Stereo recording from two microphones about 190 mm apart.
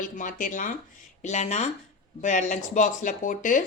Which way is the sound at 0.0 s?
45° left (ahead or behind).